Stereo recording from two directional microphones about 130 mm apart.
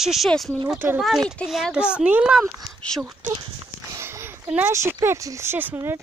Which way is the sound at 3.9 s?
20° right (ahead or behind).